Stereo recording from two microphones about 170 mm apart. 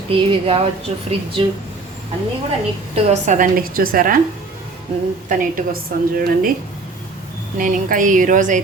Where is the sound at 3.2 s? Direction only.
50° right (ahead or behind).